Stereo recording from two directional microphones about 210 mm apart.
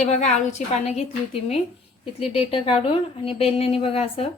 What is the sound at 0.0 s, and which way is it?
A woman's voice, 30° left (ahead or behind).